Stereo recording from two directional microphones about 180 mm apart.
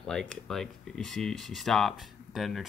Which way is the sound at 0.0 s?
5° left (ahead or behind).